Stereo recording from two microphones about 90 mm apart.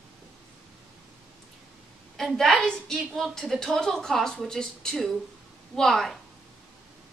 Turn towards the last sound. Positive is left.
turn(degrees=5)  # may be behind; listen again after turning